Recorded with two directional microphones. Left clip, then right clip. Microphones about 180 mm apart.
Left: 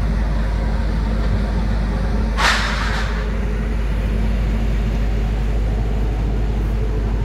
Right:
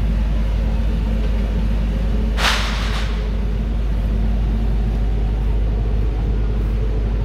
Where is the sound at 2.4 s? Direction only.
55° right (ahead or behind).